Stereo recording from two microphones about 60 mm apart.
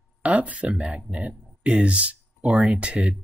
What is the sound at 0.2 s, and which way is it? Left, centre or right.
Speech, right.